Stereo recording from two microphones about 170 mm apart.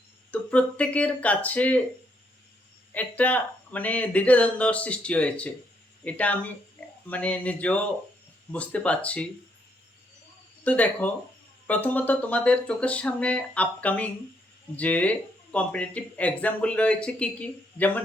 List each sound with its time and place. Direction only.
0.3 s speech: 5° left (ahead or behind)
2.9 s speech: 10° left (ahead or behind)
10.6 s speech: 10° left (ahead or behind)